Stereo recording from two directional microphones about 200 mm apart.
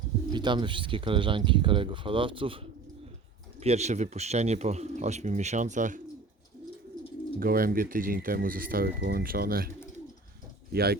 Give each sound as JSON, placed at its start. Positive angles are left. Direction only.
{"t": 0.3, "sound": "speech", "side_deg": -20}
{"t": 3.6, "sound": "speech", "side_deg": -30}
{"t": 7.3, "sound": "speech", "side_deg": -45}